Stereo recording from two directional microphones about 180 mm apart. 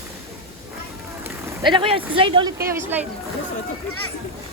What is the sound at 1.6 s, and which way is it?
Speech, 25° right (ahead or behind).